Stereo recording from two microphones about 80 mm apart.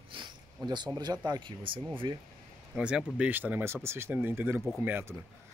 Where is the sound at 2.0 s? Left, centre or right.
Right.